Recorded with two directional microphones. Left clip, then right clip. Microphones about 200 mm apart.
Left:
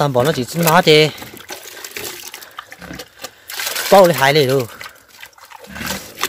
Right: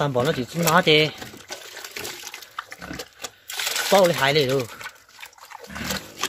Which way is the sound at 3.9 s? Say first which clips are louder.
Left 8 dB; 35° left (ahead or behind).